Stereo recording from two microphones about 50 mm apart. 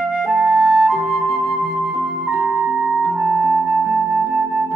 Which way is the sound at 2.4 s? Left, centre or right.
Centre.